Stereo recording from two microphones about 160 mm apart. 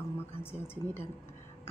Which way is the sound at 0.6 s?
15° left (ahead or behind).